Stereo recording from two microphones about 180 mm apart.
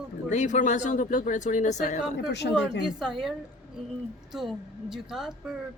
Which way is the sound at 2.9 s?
Centre (ahead or behind).